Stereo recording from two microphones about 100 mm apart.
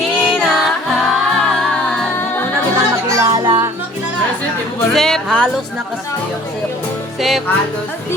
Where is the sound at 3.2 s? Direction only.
40° right (ahead or behind).